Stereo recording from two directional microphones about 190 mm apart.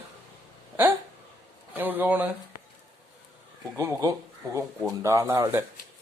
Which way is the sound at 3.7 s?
15° right (ahead or behind).